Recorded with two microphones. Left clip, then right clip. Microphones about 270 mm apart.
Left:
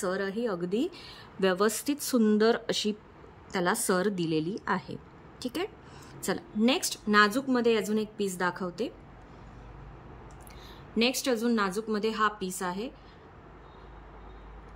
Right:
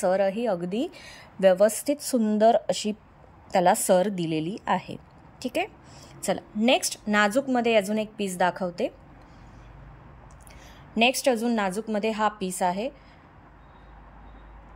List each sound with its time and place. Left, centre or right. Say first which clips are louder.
0.0 s a woman's voice: right 8 dB; centre
1.4 s a woman's voice: right 8 dB; left
1.7 s a woman's voice: right 4 dB; centre
2.3 s speech: right 9 dB; left
3.6 s a woman's voice: right 6 dB; centre
11.0 s a woman's voice: right 6 dB; centre